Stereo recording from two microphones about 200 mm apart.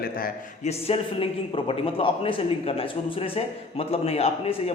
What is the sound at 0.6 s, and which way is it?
A man's voice, 30° left (ahead or behind).